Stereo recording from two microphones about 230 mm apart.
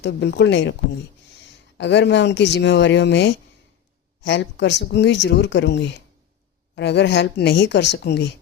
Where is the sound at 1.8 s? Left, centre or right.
Left.